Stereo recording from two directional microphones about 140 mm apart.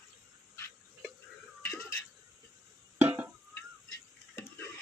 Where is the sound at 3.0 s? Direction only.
15° right (ahead or behind).